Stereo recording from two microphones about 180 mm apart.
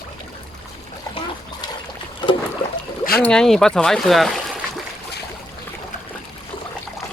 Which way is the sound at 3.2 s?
5° left (ahead or behind).